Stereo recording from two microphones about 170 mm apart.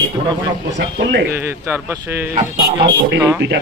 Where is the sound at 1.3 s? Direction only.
10° right (ahead or behind).